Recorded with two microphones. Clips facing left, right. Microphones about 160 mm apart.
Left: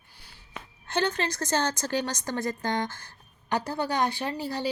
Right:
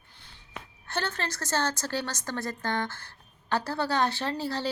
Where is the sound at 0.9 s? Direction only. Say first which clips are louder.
Left 5 dB; 15° left (ahead or behind).